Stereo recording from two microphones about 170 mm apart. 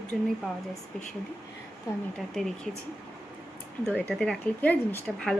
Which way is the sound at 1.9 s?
20° left (ahead or behind).